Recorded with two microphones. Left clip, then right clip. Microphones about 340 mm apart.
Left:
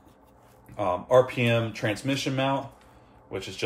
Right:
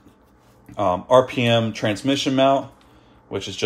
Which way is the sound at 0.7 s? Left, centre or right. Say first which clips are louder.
Right 5 dB; right.